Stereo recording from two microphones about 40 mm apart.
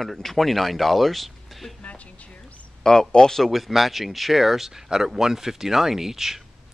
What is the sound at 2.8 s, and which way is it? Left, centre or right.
Speech, centre.